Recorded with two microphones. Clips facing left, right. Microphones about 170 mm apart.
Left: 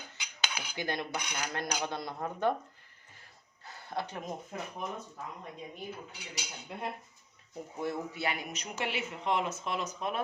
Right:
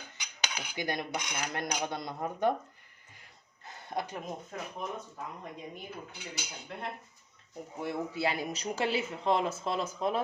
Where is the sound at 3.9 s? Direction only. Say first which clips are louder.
Right 1 dB; 15° right (ahead or behind).